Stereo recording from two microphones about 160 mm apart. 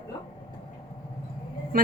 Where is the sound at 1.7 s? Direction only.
65° right (ahead or behind).